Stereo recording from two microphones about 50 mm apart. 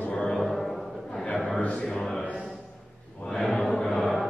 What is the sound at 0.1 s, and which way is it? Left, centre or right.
Music, centre.